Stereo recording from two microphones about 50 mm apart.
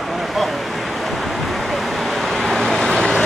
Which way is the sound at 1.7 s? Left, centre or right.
Centre.